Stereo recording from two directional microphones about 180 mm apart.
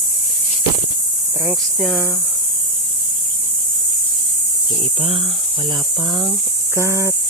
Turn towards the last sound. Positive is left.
turn(degrees=-15)  # may be behind; listen again after turning